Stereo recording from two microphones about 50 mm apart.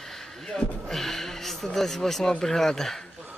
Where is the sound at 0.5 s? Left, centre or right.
Centre.